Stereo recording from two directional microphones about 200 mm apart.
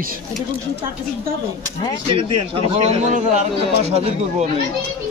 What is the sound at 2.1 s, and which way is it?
A man's voice, 30° right (ahead or behind).